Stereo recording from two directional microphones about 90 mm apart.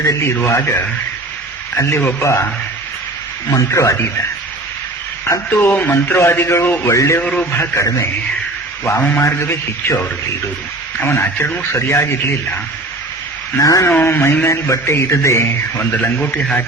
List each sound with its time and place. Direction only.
1.7 s a man's voice: 30° left (ahead or behind)
3.5 s a man's voice: 35° left (ahead or behind)
5.2 s speech: 25° left (ahead or behind)
6.8 s a man's voice: 35° left (ahead or behind)
7.2 s a man's voice: 15° left (ahead or behind)
7.5 s speech: 30° left (ahead or behind)
9.0 s a man's voice: 15° left (ahead or behind)
9.2 s speech: 30° left (ahead or behind)
11.7 s a man's voice: 30° left (ahead or behind)
13.6 s a man's voice: 35° left (ahead or behind)
13.9 s a man's voice: 25° left (ahead or behind)